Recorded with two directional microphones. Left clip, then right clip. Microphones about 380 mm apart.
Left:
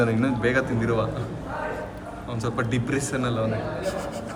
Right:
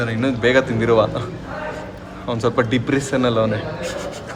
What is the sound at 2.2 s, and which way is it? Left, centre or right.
A man's voice, centre.